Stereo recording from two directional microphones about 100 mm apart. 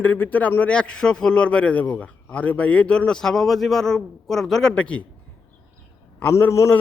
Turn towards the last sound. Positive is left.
turn(degrees=30)  # may be behind; listen again after turning